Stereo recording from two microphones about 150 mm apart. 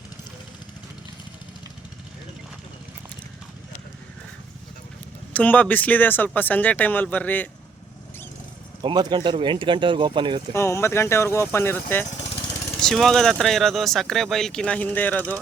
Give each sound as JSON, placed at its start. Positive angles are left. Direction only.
{"t": 5.3, "sound": "speech", "side_deg": 10}
{"t": 8.8, "sound": "speech", "side_deg": -30}
{"t": 10.5, "sound": "speech", "side_deg": 15}
{"t": 12.8, "sound": "speech", "side_deg": 0}